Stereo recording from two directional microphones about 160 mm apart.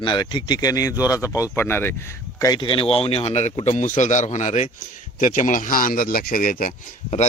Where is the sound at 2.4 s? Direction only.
25° left (ahead or behind); by 6.7 s 60° left (ahead or behind).